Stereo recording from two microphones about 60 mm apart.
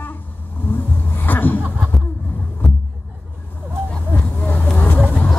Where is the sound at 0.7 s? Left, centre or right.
Left.